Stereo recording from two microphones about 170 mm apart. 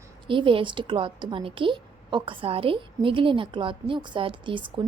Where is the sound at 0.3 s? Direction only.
30° right (ahead or behind).